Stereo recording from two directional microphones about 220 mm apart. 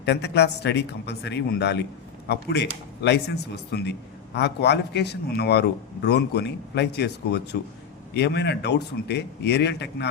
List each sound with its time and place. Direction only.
0.0 s a man's voice: 50° left (ahead or behind)